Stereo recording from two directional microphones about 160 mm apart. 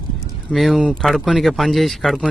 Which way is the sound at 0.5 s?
Centre (ahead or behind).